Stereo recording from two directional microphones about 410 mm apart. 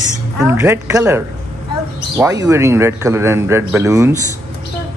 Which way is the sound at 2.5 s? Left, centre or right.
Centre.